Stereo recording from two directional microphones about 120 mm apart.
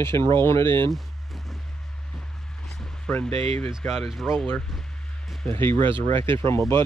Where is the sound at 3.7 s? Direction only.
5° right (ahead or behind).